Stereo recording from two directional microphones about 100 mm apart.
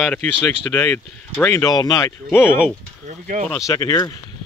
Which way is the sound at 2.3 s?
25° left (ahead or behind).